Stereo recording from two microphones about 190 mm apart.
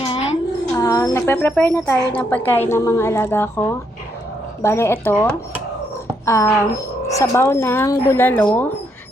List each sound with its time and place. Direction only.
0.1 s music: 35° left (ahead or behind)
0.7 s speech: 15° left (ahead or behind)